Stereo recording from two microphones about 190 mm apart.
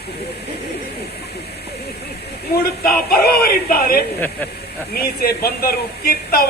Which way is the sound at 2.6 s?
55° left (ahead or behind).